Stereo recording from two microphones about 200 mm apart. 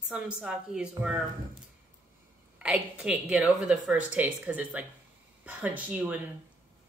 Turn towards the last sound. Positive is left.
turn(degrees=-5)  # may be behind; listen again after turning